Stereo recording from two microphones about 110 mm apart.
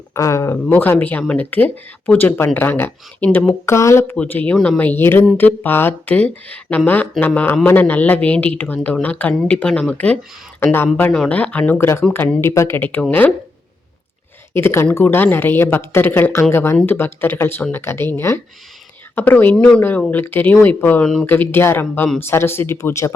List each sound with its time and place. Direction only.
0.1 s speech: 25° left (ahead or behind)
14.5 s speech: 20° left (ahead or behind)